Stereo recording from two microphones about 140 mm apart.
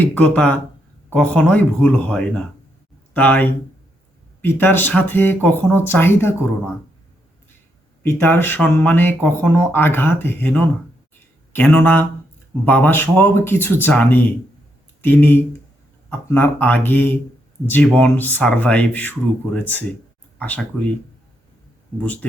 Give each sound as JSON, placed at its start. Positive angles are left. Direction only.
{"t": 0.0, "sound": "speech", "side_deg": 10}
{"t": 8.0, "sound": "speech", "side_deg": 15}
{"t": 22.0, "sound": "speech", "side_deg": 10}